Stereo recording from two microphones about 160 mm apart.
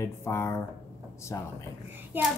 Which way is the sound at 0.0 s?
15° left (ahead or behind).